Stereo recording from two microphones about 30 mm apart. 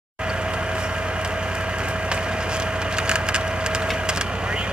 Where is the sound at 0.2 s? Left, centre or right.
Right.